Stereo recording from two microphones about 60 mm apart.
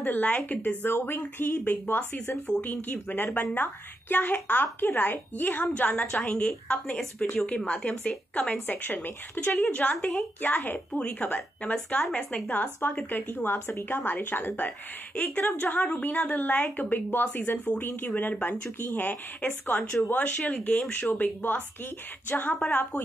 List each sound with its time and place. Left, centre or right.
0.0 s a woman's voice: left
0.8 s a woman's voice: left
9.8 s a woman's voice: left
10.9 s a woman's voice: centre; by 14.7 s left
15.1 s a woman's voice: left